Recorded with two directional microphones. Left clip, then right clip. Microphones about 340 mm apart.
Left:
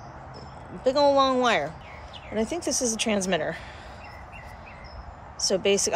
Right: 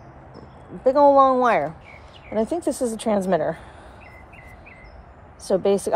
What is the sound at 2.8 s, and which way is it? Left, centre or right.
Speech, centre.